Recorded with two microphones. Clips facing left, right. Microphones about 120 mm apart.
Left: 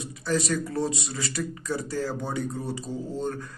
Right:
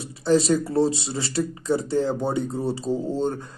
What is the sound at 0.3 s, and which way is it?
Speech, 30° right (ahead or behind).